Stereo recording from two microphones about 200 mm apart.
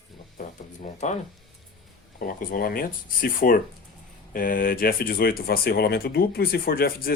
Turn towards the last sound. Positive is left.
turn(degrees=50)  # may be behind; listen again after turning